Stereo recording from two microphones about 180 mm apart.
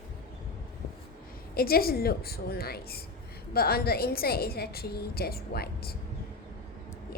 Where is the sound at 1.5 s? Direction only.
55° left (ahead or behind).